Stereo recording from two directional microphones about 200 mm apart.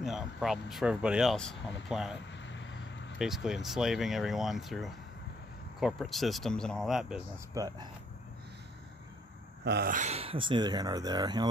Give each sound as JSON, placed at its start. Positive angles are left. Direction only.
{"t": 0.0, "sound": "speech", "side_deg": 0}
{"t": 2.4, "sound": "vehicle", "side_deg": 65}
{"t": 3.2, "sound": "speech", "side_deg": 0}
{"t": 7.5, "sound": "speech", "side_deg": -20}
{"t": 9.7, "sound": "speech", "side_deg": -55}
{"t": 9.9, "sound": "speech", "side_deg": -30}